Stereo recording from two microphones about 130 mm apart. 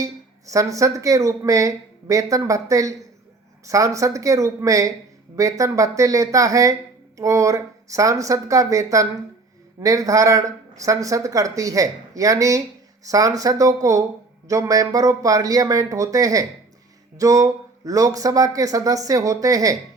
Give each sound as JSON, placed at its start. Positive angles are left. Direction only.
{"t": 0.0, "sound": "speech", "side_deg": -25}